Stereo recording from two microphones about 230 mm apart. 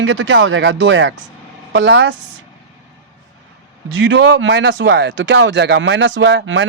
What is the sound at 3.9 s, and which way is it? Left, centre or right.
Speech, right.